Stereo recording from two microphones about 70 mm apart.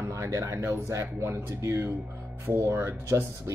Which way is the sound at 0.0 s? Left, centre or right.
Right.